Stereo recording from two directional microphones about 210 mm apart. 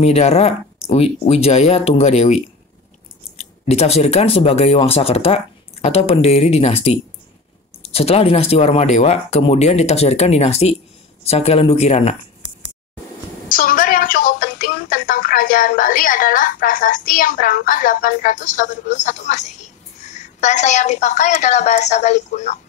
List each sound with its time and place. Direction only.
0.0 s speech: 30° left (ahead or behind)
13.5 s speech: 40° left (ahead or behind)